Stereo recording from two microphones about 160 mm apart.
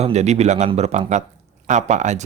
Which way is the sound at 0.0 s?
45° right (ahead or behind).